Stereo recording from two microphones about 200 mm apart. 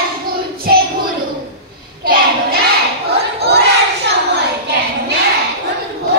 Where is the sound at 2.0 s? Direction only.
50° right (ahead or behind).